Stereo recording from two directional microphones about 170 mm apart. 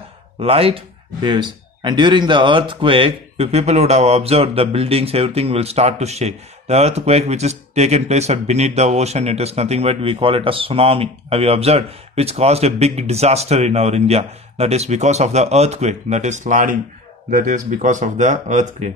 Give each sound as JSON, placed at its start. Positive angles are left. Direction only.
{"t": 0.4, "sound": "speech", "side_deg": -35}